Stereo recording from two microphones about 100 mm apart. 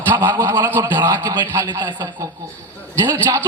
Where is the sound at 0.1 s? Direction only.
25° right (ahead or behind).